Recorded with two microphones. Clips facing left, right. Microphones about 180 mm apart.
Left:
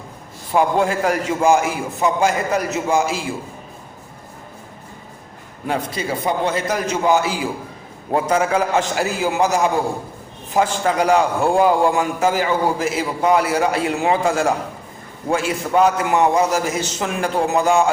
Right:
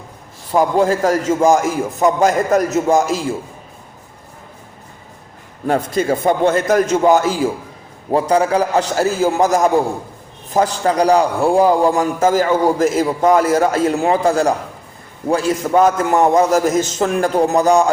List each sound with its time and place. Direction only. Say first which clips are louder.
0.5 s a man's voice: right 3 dB; 40° right (ahead or behind)
5.6 s a man's voice: right 6 dB; 45° right (ahead or behind)